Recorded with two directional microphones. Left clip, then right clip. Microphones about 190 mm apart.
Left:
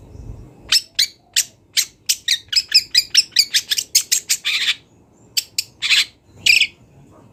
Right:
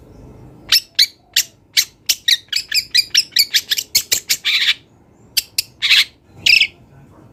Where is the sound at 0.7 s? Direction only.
5° right (ahead or behind).